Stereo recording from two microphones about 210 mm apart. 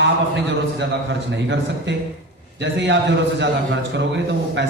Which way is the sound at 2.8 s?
60° right (ahead or behind).